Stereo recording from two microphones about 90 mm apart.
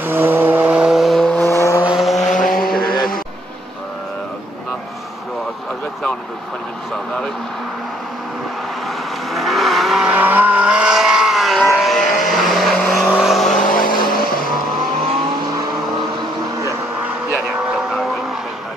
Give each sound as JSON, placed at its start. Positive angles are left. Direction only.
{"t": 0.0, "sound": "vehicle", "side_deg": -25}
{"t": 1.4, "sound": "vehicle", "side_deg": 30}
{"t": 2.0, "sound": "vehicle", "side_deg": 0}
{"t": 8.8, "sound": "vehicle", "side_deg": 0}
{"t": 10.0, "sound": "vehicle", "side_deg": -20}